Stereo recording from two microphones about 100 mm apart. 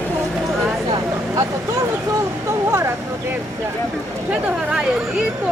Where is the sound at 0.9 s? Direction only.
35° right (ahead or behind).